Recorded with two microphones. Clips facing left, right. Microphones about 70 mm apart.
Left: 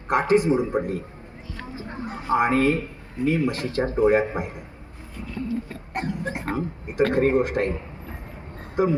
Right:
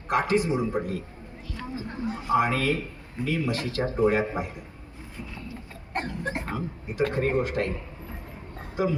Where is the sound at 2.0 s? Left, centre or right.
Left.